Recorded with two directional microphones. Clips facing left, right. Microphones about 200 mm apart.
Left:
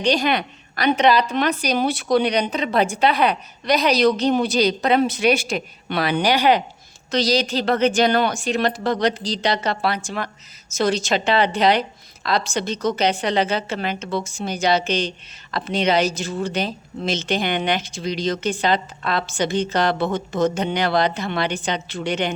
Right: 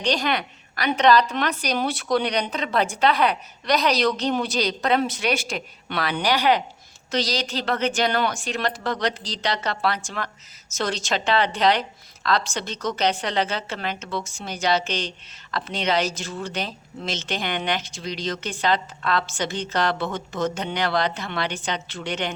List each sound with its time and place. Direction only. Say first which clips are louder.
0.0 s speech: left 4 dB; 10° left (ahead or behind)